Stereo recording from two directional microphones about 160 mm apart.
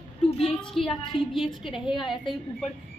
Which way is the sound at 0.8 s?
Centre (ahead or behind).